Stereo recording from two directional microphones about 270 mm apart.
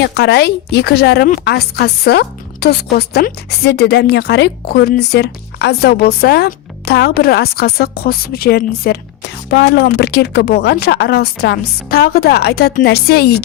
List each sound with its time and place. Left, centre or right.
0.1 s speech: left